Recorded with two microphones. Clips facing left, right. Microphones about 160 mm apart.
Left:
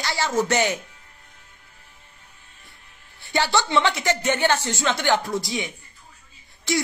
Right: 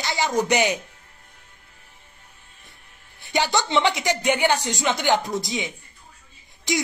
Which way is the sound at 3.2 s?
20° right (ahead or behind).